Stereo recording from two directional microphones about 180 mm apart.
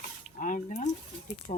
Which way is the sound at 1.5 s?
40° left (ahead or behind).